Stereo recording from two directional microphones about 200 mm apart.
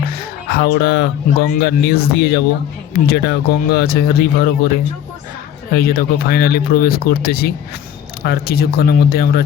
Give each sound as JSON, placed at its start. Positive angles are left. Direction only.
{"t": 0.0, "sound": "speech", "side_deg": 50}
{"t": 5.7, "sound": "speech", "side_deg": 50}